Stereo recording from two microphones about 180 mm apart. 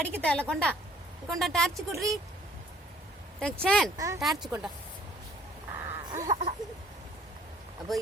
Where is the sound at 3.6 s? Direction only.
5° left (ahead or behind).